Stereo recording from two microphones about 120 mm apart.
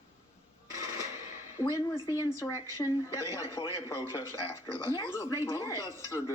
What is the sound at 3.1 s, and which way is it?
Speech, 25° left (ahead or behind).